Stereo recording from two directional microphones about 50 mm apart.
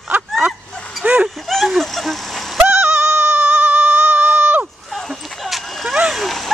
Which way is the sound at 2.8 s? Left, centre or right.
Right.